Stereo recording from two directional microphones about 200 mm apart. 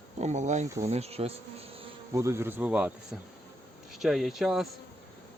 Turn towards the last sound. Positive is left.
turn(degrees=0)  # may be behind; listen again after turning